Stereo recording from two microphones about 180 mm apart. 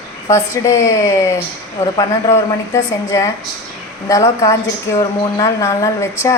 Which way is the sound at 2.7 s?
20° left (ahead or behind).